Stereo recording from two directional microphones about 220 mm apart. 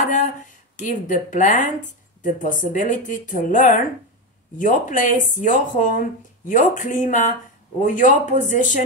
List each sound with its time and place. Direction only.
0.1 s speech: 35° left (ahead or behind)